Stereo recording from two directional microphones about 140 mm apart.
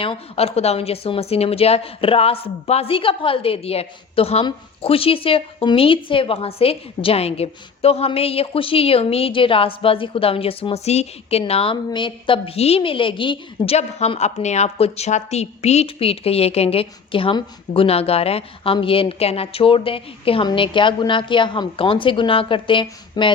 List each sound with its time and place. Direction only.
0.0 s a woman's voice: 45° left (ahead or behind)
13.7 s a woman's voice: 50° left (ahead or behind); by 23.3 s 35° left (ahead or behind)